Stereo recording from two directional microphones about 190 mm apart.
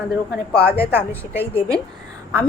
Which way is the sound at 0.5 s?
60° left (ahead or behind).